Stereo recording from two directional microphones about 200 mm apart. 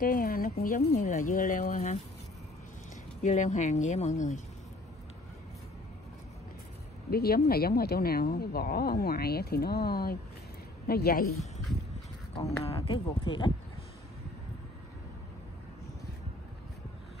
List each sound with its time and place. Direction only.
0.0 s speech: 45° left (ahead or behind)
3.2 s speech: 35° left (ahead or behind)
7.1 s speech: 50° left (ahead or behind)
12.4 s speech: 30° left (ahead or behind)